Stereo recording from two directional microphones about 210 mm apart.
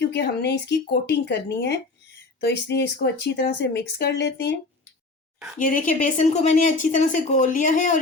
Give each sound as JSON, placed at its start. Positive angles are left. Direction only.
{"t": 0.0, "sound": "speech", "side_deg": 55}
{"t": 2.4, "sound": "speech", "side_deg": 50}
{"t": 5.5, "sound": "a woman's voice", "side_deg": 40}